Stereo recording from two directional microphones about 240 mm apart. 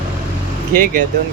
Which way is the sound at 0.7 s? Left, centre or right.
Right.